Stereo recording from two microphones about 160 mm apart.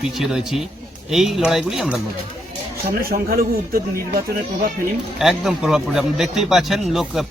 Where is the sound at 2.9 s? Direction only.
65° right (ahead or behind).